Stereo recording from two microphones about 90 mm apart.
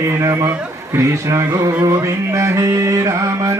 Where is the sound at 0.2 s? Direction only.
35° right (ahead or behind).